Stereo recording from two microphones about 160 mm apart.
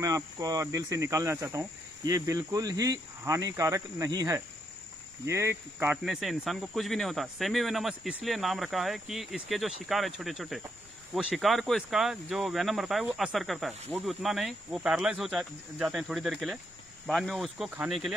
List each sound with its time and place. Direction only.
0.0 s speech: 20° right (ahead or behind)
6.0 s speech: centre (ahead or behind)